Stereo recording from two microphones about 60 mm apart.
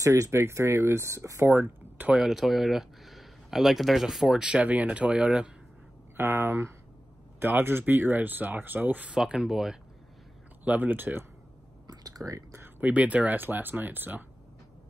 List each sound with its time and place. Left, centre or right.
0.0 s speech: right
1.5 s speech: right
2.1 s speech: centre
6.1 s speech: right
9.1 s speech: centre
10.6 s speech: right
11.9 s a sound: right
12.8 s speech: right